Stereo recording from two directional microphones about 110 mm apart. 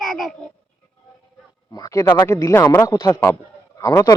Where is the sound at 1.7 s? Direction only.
30° left (ahead or behind).